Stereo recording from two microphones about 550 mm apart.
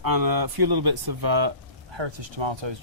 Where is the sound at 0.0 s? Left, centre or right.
Right.